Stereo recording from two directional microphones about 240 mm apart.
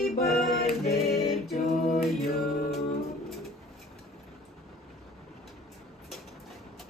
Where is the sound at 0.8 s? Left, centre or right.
Left.